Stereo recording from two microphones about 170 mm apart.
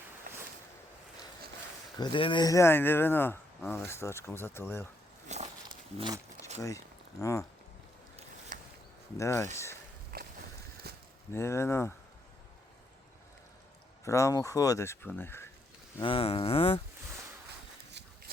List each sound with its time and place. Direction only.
2.0 s speech: 30° left (ahead or behind); by 4.9 s 15° left (ahead or behind)
5.3 s speech: 40° right (ahead or behind)
6.6 s speech: 20° left (ahead or behind)
8.5 s a sound: 50° right (ahead or behind)
9.1 s speech: 15° left (ahead or behind)
10.1 s a sound: 55° right (ahead or behind)
10.8 s a sound: 70° right (ahead or behind)
11.3 s speech: 15° left (ahead or behind)
14.0 s speech: 20° left (ahead or behind)
16.0 s speech: 30° left (ahead or behind)